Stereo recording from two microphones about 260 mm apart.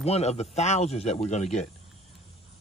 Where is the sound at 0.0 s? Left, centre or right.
Left.